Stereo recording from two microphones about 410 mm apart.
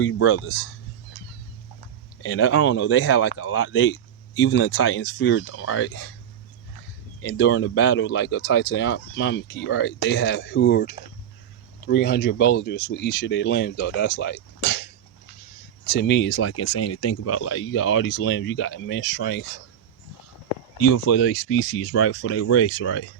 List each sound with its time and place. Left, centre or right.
0.0 s speech: left
2.2 s speech: left
7.2 s speech: left
15.9 s speech: left
20.7 s speech: left